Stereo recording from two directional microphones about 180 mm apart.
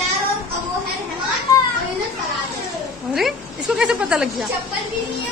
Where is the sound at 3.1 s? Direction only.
Centre (ahead or behind).